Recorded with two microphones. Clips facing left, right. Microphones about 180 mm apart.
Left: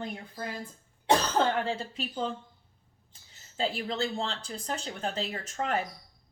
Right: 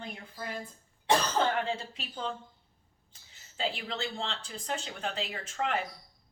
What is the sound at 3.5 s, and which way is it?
Speech, 35° left (ahead or behind).